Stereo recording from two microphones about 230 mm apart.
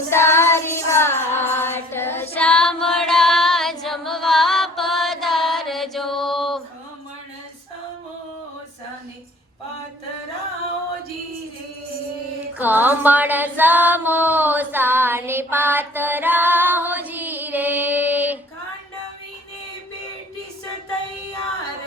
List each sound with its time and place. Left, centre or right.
0.1 s music: centre
12.5 s music: centre